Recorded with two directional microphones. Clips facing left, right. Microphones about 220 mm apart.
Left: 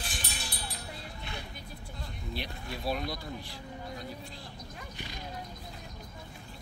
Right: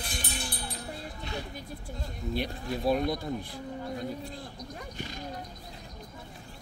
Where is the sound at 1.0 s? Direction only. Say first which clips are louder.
Right 5 dB; 40° right (ahead or behind).